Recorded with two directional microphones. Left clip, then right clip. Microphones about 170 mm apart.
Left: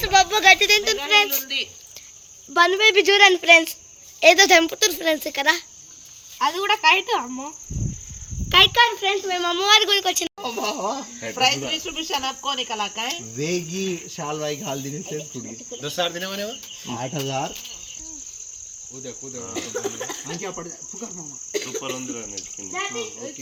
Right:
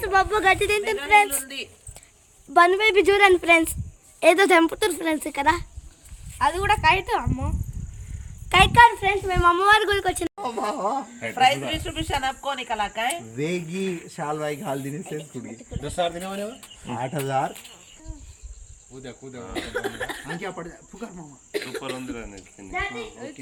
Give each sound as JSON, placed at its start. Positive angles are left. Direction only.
{"t": 0.0, "sound": "speech", "side_deg": -50}
{"t": 2.5, "sound": "speech", "side_deg": -85}
{"t": 6.4, "sound": "speech", "side_deg": -35}
{"t": 8.4, "sound": "speech", "side_deg": -70}
{"t": 10.3, "sound": "speech", "side_deg": 15}
{"t": 11.2, "sound": "speech", "side_deg": -35}
{"t": 13.3, "sound": "speech", "side_deg": 25}
{"t": 15.8, "sound": "speech", "side_deg": -65}
{"t": 17.2, "sound": "cricket", "side_deg": 20}
{"t": 19.4, "sound": "speech", "side_deg": 0}